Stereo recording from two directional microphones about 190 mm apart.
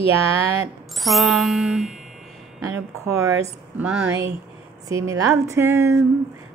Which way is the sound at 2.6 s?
15° right (ahead or behind).